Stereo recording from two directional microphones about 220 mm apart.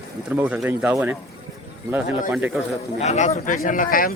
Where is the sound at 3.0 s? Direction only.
30° left (ahead or behind).